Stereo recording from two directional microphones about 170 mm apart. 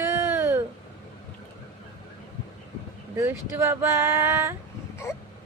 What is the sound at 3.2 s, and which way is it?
Speech, 15° right (ahead or behind).